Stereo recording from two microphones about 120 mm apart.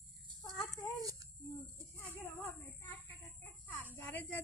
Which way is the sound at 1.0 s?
30° right (ahead or behind).